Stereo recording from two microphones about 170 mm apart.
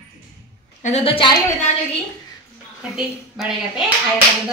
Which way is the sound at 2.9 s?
5° right (ahead or behind).